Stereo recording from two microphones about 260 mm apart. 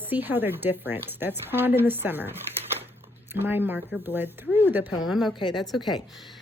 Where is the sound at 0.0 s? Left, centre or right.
Centre.